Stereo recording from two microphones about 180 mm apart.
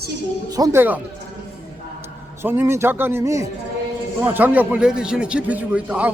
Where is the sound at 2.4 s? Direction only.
10° right (ahead or behind).